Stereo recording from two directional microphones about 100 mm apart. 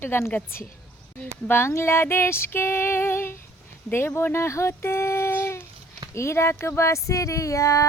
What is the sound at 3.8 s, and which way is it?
Speech, 25° left (ahead or behind).